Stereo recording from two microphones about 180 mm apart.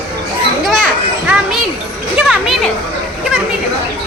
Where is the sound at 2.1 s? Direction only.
5° right (ahead or behind).